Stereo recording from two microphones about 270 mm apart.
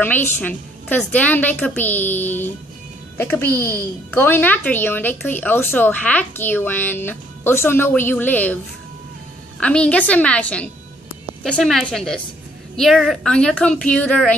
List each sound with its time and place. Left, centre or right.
0.0 s speech: centre
9.6 s a woman's voice: centre